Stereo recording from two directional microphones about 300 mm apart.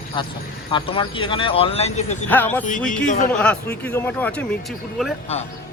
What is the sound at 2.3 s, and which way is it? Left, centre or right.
Speech, centre.